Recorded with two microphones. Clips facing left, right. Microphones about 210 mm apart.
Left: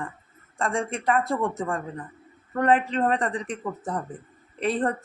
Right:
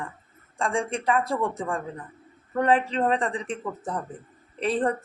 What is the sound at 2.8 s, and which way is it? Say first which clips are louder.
Speech: even; centre (ahead or behind).